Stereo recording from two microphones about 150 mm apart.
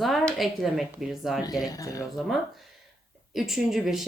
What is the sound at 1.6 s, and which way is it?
Speech, 25° left (ahead or behind).